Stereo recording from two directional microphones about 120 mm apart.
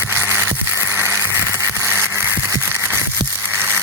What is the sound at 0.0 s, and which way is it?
Music, 20° right (ahead or behind).